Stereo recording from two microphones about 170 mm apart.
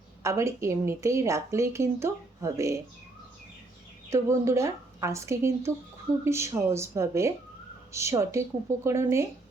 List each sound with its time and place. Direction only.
0.2 s a woman's voice: 15° right (ahead or behind)
4.1 s a woman's voice: 15° right (ahead or behind)